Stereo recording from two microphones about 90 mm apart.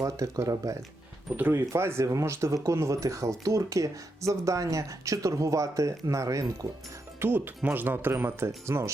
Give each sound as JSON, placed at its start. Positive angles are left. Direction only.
{"t": 0.0, "sound": "speech", "side_deg": -40}
{"t": 1.4, "sound": "speech", "side_deg": -25}
{"t": 7.2, "sound": "speech", "side_deg": -25}